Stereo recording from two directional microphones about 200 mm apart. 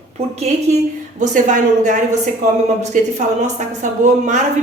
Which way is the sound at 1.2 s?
40° right (ahead or behind).